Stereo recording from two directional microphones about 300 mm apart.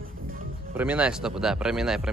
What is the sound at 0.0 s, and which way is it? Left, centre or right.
Music, right.